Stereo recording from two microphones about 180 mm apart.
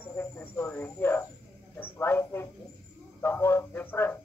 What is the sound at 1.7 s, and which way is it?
Speech, 10° left (ahead or behind).